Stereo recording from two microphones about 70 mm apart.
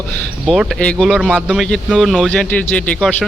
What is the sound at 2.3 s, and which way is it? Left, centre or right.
Speech, centre.